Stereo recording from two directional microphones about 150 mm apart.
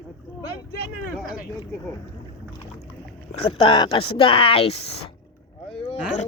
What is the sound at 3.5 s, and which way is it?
Speech, 35° left (ahead or behind).